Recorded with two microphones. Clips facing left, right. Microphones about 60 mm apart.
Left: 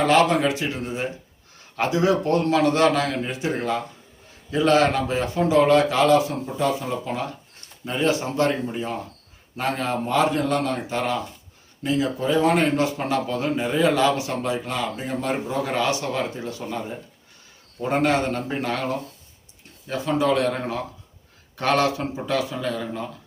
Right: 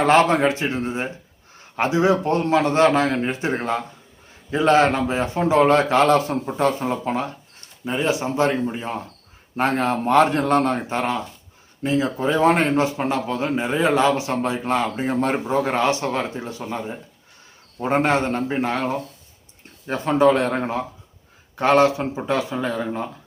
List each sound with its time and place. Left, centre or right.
0.0 s a man's voice: right
7.9 s a man's voice: centre
9.6 s a man's voice: right
10.4 s a man's voice: right
19.9 s a man's voice: right